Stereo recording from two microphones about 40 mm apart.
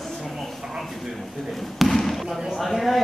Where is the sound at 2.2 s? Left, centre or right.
Centre.